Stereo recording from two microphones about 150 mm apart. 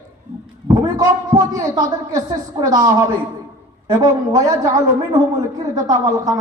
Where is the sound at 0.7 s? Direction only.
25° right (ahead or behind).